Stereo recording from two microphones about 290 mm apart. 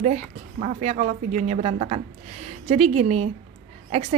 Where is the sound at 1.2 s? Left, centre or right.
Right.